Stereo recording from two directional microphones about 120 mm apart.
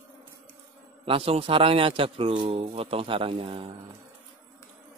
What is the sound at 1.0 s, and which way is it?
Speech, 50° right (ahead or behind).